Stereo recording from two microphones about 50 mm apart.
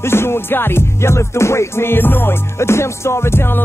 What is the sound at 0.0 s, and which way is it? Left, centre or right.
Music, left.